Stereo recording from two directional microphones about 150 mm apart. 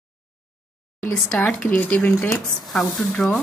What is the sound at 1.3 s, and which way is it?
Speech, 5° left (ahead or behind).